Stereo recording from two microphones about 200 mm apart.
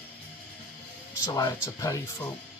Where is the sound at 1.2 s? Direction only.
20° left (ahead or behind).